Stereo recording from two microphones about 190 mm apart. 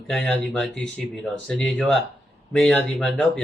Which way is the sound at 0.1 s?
5° left (ahead or behind).